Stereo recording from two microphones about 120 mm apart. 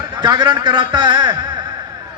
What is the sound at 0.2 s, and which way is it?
A man's voice, 35° right (ahead or behind).